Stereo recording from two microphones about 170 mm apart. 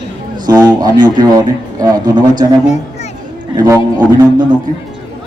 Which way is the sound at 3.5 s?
20° right (ahead or behind).